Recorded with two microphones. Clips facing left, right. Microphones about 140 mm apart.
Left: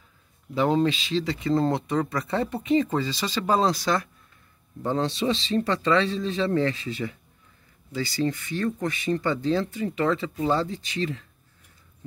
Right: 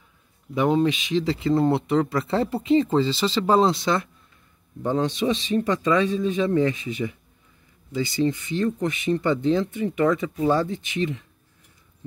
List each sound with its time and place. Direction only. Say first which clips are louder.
0.6 s speech: right 2 dB; 15° right (ahead or behind)
1.2 s speech: right 3 dB; 30° right (ahead or behind)